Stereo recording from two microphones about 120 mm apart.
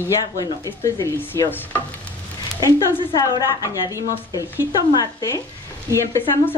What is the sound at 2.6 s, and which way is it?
A woman's voice, 30° left (ahead or behind).